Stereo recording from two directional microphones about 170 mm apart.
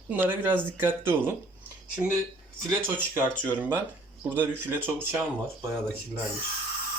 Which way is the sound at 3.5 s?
10° right (ahead or behind).